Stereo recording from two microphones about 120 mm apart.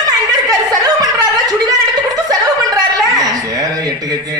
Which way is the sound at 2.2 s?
30° right (ahead or behind).